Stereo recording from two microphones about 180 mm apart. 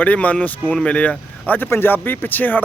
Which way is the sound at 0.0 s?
10° left (ahead or behind).